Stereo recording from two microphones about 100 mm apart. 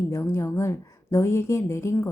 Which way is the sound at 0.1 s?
25° left (ahead or behind).